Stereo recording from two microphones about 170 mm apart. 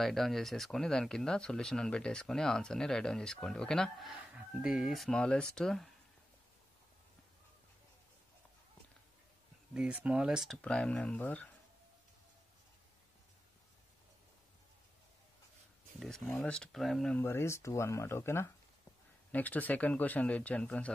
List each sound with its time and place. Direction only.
0.0 s speech: centre (ahead or behind)
9.8 s speech: 5° right (ahead or behind); by 11.5 s 10° left (ahead or behind)
16.0 s speech: 5° left (ahead or behind)
17.2 s speech: 15° left (ahead or behind)